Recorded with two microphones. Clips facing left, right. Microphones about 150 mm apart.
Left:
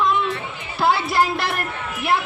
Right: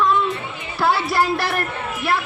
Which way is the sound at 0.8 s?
25° left (ahead or behind).